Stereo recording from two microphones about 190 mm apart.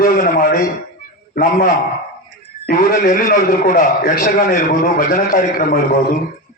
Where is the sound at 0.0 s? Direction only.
55° left (ahead or behind).